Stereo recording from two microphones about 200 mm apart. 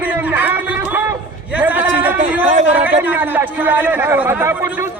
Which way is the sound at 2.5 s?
35° right (ahead or behind).